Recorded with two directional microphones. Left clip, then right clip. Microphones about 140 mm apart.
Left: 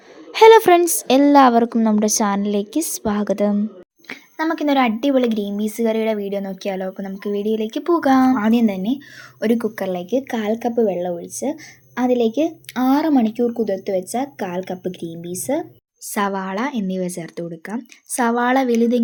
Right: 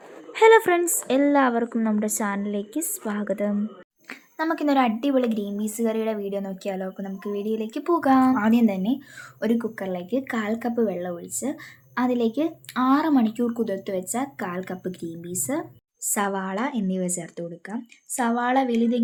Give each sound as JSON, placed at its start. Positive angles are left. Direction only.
{"t": 0.3, "sound": "a woman's voice", "side_deg": 45}
{"t": 4.1, "sound": "speech", "side_deg": 20}
{"t": 9.6, "sound": "a woman's voice", "side_deg": 45}
{"t": 10.1, "sound": "speech", "side_deg": 20}
{"t": 16.1, "sound": "speech", "side_deg": 20}